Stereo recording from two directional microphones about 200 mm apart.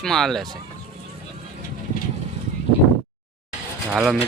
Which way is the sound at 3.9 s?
5° right (ahead or behind).